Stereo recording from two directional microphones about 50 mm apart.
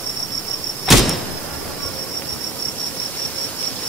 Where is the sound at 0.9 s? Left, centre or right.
Centre.